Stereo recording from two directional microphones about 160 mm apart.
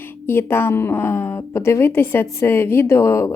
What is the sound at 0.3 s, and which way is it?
A woman's voice, 15° left (ahead or behind).